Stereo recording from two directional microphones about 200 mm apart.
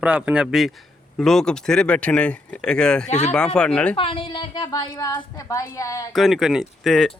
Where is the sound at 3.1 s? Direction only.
35° left (ahead or behind).